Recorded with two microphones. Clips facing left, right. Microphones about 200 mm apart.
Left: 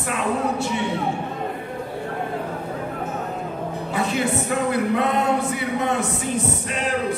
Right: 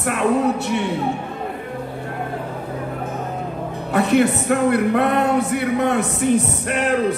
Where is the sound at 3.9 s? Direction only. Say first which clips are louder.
Right 8 dB; 60° right (ahead or behind).